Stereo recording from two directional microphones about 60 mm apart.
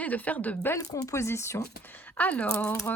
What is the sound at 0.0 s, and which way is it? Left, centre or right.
Speech, left.